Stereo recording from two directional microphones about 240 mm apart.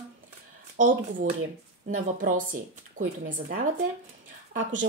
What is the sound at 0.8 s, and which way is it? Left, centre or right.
A woman's voice, right.